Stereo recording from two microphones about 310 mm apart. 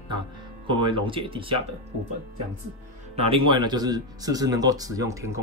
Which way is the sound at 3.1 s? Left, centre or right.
Centre.